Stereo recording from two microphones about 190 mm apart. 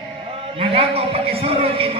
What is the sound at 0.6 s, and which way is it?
A man's voice, 30° right (ahead or behind).